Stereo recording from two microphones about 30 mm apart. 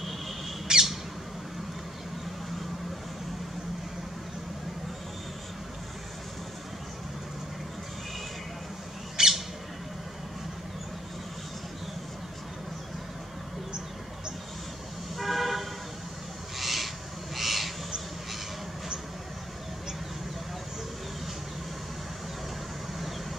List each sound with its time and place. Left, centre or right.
0.7 s squawk: centre
9.2 s bird: centre
15.1 s vehicle: centre
16.5 s owl: centre